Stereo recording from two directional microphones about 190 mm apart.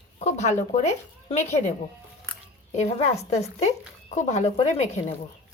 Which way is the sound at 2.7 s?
30° left (ahead or behind).